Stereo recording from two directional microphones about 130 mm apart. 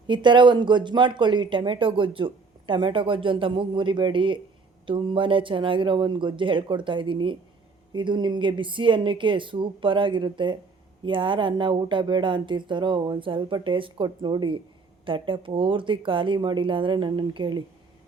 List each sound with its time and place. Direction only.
0.1 s speech: 35° right (ahead or behind)